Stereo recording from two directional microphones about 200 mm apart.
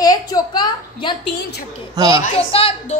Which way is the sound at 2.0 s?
20° right (ahead or behind).